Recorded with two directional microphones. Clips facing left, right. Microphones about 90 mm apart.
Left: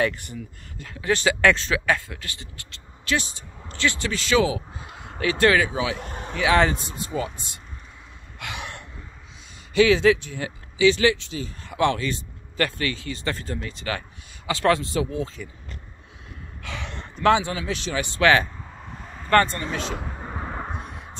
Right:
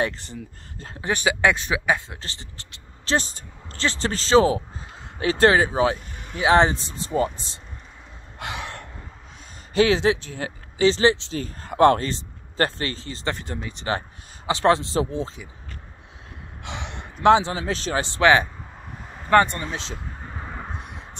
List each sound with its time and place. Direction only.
0.7 s speech: 35° right (ahead or behind)
1.0 s speech: 15° right (ahead or behind)
3.1 s speech: 35° right (ahead or behind)
6.3 s speech: 30° right (ahead or behind)
8.4 s a sound: 35° right (ahead or behind)
9.8 s speech: 30° right (ahead or behind)
11.3 s speech: 45° right (ahead or behind)
12.1 s a man's voice: 30° right (ahead or behind)
16.6 s gasp: 25° right (ahead or behind)
17.2 s speech: 30° right (ahead or behind)
18.0 s speech: 25° right (ahead or behind)
18.8 s vehicle: 10° right (ahead or behind)
20.2 s a sound: 20° left (ahead or behind)
20.8 s a sound: 20° right (ahead or behind)